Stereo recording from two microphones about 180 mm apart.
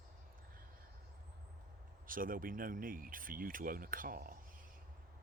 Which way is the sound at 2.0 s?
50° right (ahead or behind).